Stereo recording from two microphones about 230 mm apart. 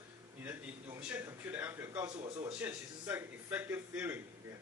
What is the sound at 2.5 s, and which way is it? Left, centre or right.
A man's voice, centre.